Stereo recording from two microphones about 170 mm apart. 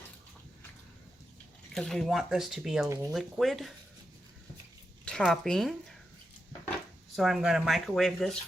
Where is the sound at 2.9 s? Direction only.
15° right (ahead or behind).